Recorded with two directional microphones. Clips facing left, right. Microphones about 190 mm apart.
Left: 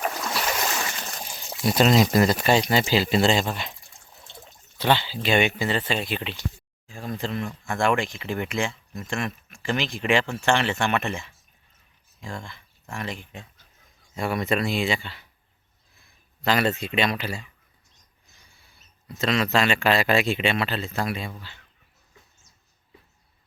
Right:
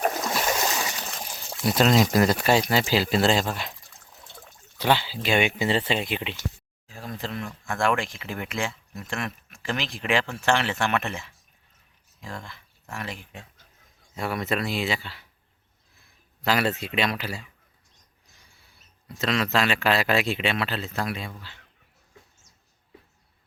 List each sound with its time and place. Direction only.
0.0 s a sound: 40° right (ahead or behind)
1.6 s speech: 5° left (ahead or behind)
2.2 s speech: 5° right (ahead or behind)
4.8 s speech: 10° right (ahead or behind)
5.5 s speech: 25° right (ahead or behind)
6.8 s speech: centre (ahead or behind)
18.5 s rodents: centre (ahead or behind)
19.2 s speech: centre (ahead or behind)